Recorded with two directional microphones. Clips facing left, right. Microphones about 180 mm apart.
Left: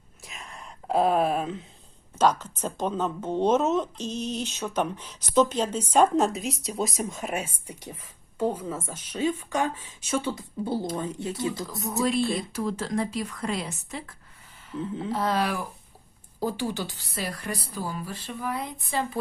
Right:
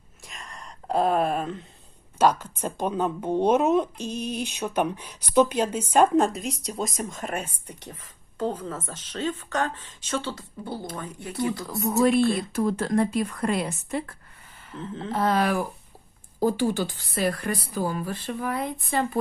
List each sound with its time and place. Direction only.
0.3 s a sound: 5° left (ahead or behind)
2.1 s speech: 10° right (ahead or behind)
6.1 s speech: centre (ahead or behind); by 11.3 s 25° left (ahead or behind)
11.9 s a woman's voice: 60° right (ahead or behind)